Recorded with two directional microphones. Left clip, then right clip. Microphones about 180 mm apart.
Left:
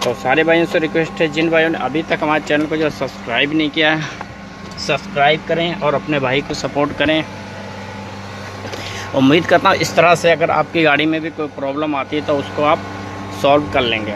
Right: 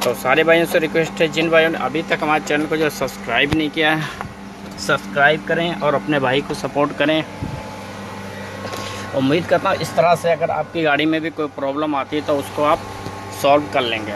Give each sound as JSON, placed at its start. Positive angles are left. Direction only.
{"t": 0.0, "sound": "speech", "side_deg": 5}
{"t": 4.8, "sound": "speech", "side_deg": -15}
{"t": 9.1, "sound": "speech", "side_deg": 5}
{"t": 9.9, "sound": "speech", "side_deg": 25}
{"t": 10.7, "sound": "speech", "side_deg": 5}
{"t": 11.0, "sound": "speech", "side_deg": -15}
{"t": 13.4, "sound": "speech", "side_deg": 15}